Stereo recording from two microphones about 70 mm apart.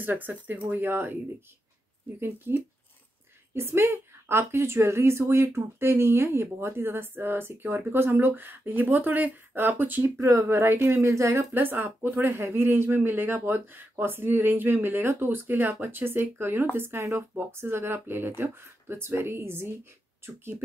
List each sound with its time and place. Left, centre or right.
0.0 s speech: right
2.1 s speech: right
10.0 s speech: right
11.5 s speech: right